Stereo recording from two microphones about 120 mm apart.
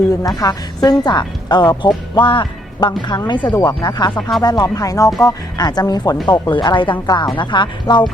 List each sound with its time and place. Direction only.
0.1 s a woman's voice: 30° left (ahead or behind)